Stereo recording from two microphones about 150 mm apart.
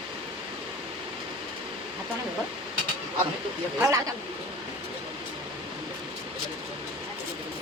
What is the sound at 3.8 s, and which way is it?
Speech, 20° right (ahead or behind).